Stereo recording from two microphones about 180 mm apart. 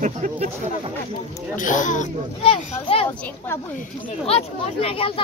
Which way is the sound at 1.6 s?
45° left (ahead or behind).